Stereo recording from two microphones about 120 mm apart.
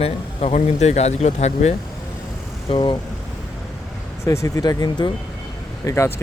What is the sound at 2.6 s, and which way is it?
Speech, 40° left (ahead or behind).